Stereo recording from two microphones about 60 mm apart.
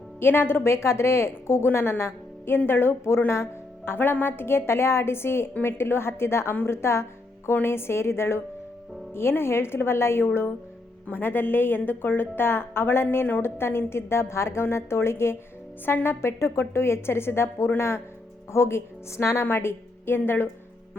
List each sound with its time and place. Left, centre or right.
0.2 s a woman's voice: left
3.2 s music: left
3.9 s a woman's voice: left
19.5 s a woman's voice: left